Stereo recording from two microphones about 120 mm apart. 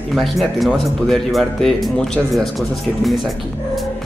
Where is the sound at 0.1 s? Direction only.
Centre (ahead or behind).